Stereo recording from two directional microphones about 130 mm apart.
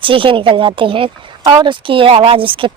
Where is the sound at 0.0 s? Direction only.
40° right (ahead or behind).